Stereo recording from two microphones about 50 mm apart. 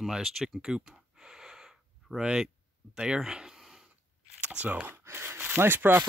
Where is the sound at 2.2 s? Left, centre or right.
Centre.